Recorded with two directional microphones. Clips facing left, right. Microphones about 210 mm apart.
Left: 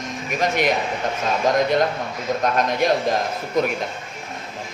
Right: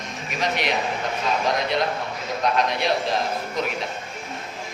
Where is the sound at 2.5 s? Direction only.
45° left (ahead or behind).